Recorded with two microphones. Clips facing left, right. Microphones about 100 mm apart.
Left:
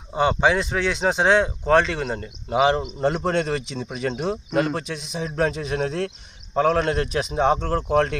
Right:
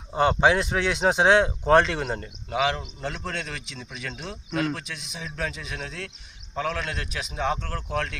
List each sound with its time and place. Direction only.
0.1 s speech: centre (ahead or behind)
2.5 s speech: 25° left (ahead or behind)
3.2 s a man's voice: 45° left (ahead or behind); by 7.9 s 25° left (ahead or behind)